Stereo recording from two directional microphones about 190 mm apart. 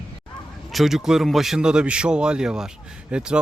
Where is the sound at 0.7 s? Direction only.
Centre (ahead or behind).